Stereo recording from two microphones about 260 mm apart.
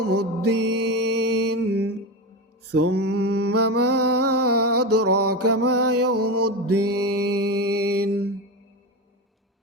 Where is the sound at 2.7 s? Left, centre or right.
Right.